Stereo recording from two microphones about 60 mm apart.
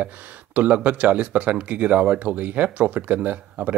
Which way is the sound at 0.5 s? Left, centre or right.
Right.